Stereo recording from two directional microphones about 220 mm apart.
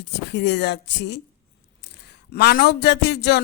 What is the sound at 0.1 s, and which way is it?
A man's voice, 50° left (ahead or behind).